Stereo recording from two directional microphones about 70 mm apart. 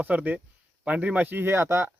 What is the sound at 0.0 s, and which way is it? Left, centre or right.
Speech, right.